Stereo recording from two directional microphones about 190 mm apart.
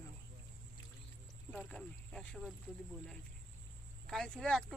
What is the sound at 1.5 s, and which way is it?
Speech, 5° left (ahead or behind).